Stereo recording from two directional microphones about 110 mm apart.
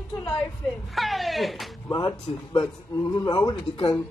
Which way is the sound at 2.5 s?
30° left (ahead or behind).